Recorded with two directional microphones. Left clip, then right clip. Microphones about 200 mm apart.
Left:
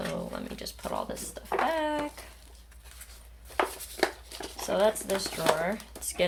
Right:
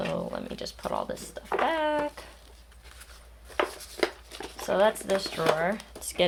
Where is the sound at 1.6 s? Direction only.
30° right (ahead or behind).